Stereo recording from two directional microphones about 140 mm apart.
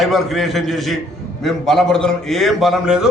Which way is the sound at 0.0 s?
Centre (ahead or behind).